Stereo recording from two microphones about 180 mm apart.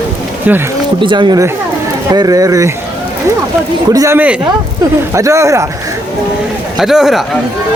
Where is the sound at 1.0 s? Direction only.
25° right (ahead or behind).